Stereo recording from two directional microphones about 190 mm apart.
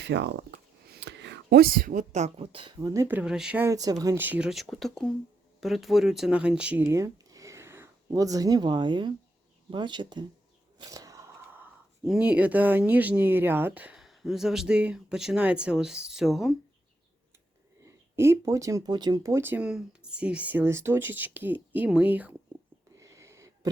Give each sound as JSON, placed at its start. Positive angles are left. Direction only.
{"t": 0.0, "sound": "speech", "side_deg": -65}
{"t": 17.8, "sound": "speech", "side_deg": -15}
{"t": 23.0, "sound": "a sound", "side_deg": -15}